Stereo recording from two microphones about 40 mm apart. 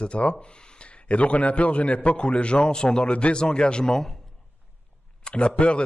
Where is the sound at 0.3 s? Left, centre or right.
Left.